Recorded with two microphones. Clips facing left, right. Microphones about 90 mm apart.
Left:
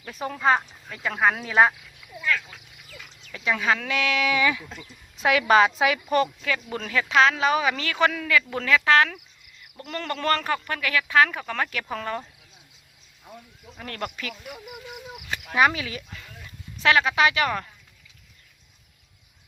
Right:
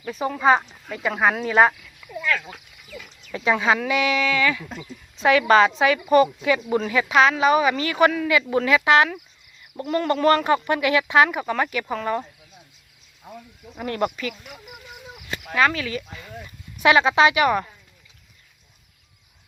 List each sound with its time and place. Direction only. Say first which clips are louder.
0.0 s speech: right 4 dB; centre (ahead or behind)
3.3 s speech: right 5 dB; 35° right (ahead or behind)
3.8 s speech: right 4 dB; 10° right (ahead or behind)
4.2 s speech: right 1 dB; 15° left (ahead or behind)
5.1 s speech: right 3 dB; centre (ahead or behind)
6.4 s speech: right 8 dB; 15° right (ahead or behind)
13.7 s speech: right 9 dB; 15° right (ahead or behind)
14.2 s speech: right 4 dB; 5° left (ahead or behind)
16.7 s speech: right 4 dB; 15° right (ahead or behind)
17.3 s speech: right 6 dB; 10° right (ahead or behind)